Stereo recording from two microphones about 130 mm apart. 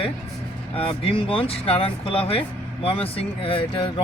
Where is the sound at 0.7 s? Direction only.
45° left (ahead or behind).